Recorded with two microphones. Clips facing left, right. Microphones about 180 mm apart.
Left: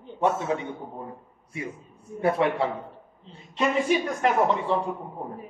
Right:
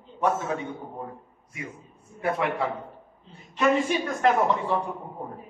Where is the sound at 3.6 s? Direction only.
15° left (ahead or behind).